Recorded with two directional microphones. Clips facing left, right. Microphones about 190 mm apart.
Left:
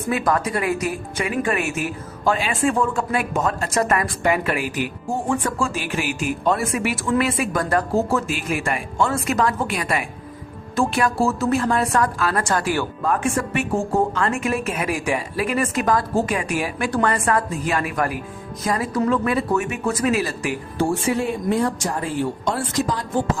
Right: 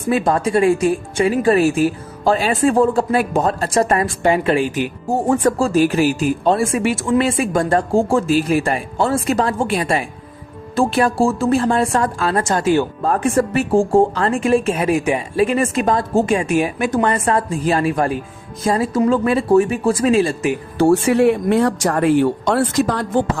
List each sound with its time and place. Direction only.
0.1 s speech: 30° right (ahead or behind)
5.0 s speech: 40° right (ahead or behind); by 12.9 s 20° right (ahead or behind)
13.0 s speech: 35° right (ahead or behind)
20.7 s speech: 70° right (ahead or behind)